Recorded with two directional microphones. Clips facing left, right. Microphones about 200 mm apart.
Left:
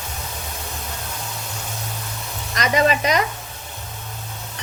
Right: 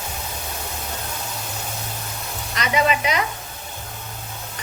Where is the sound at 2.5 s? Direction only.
45° left (ahead or behind).